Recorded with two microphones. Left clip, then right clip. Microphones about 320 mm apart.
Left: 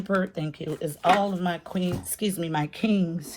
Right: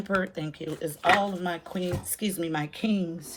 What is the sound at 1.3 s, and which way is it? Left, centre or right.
Speech, left.